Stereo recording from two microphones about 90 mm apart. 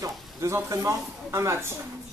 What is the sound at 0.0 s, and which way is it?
A man's voice, 30° right (ahead or behind).